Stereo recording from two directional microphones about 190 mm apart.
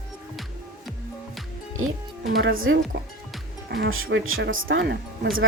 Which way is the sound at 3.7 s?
65° right (ahead or behind).